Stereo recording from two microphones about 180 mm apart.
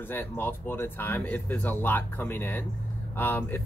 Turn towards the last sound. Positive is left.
turn(degrees=10)  # may be behind; listen again after turning